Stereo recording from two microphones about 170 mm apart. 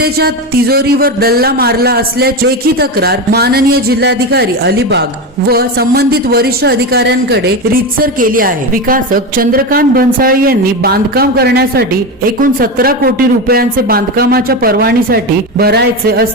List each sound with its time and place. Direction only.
0.0 s speech: 65° right (ahead or behind); by 5.0 s 80° right
5.5 s a man's voice: 65° right (ahead or behind)
7.9 s speech: 55° right (ahead or behind)